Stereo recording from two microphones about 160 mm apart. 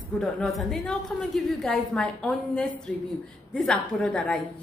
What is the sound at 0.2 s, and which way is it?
A woman's voice, centre (ahead or behind).